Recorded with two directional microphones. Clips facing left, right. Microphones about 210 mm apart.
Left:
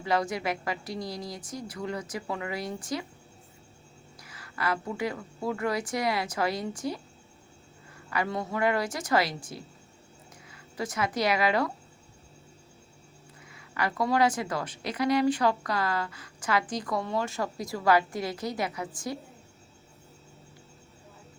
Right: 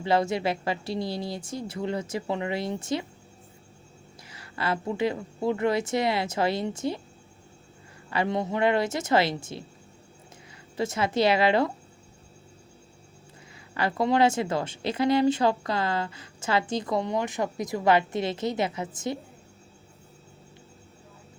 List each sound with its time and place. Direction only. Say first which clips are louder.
0.0 s speech: right 4 dB; 25° right (ahead or behind)
4.2 s speech: right 1 dB; 25° right (ahead or behind)
8.1 s speech: right 4 dB; 25° right (ahead or behind)
10.8 s speech: right 4 dB; 25° right (ahead or behind)
13.7 s speech: right 3 dB; 25° right (ahead or behind)